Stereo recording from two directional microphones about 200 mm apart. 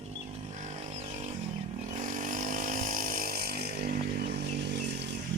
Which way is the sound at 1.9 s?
40° right (ahead or behind).